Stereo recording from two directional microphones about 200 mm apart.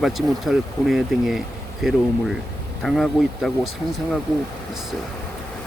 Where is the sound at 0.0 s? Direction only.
Centre (ahead or behind).